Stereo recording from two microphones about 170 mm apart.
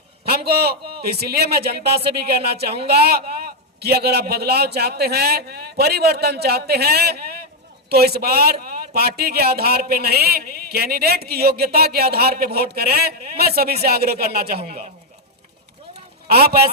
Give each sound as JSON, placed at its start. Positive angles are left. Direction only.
{"t": 0.3, "sound": "a man's voice", "side_deg": -70}
{"t": 14.6, "sound": "speech", "side_deg": -35}
{"t": 16.3, "sound": "speech", "side_deg": -65}